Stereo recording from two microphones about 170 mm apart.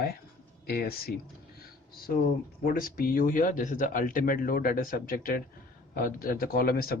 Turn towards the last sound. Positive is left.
turn(degrees=60)  # may be behind; listen again after turning